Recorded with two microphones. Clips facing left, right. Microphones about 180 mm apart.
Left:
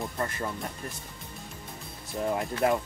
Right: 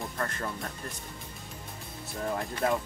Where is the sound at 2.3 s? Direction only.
20° left (ahead or behind).